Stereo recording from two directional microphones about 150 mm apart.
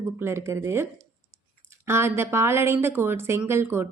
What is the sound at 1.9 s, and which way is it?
A woman's voice, 15° right (ahead or behind).